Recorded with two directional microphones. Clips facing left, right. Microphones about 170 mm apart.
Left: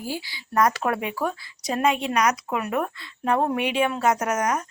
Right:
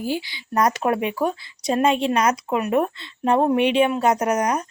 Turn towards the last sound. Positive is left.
turn(degrees=-20)  # may be behind; listen again after turning